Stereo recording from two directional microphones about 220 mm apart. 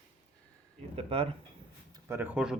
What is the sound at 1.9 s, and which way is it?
Speech, 15° right (ahead or behind).